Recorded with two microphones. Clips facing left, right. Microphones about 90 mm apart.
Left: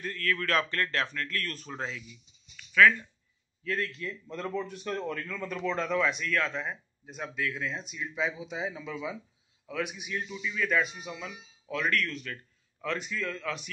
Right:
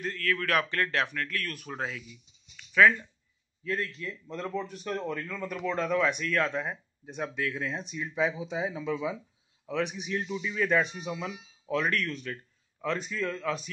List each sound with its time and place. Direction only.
0.0 s speech: 10° right (ahead or behind)
2.5 s a sound: 20° right (ahead or behind)
3.6 s speech: 25° right (ahead or behind)
4.4 s speech: 5° right (ahead or behind)
6.2 s speech: 20° right (ahead or behind)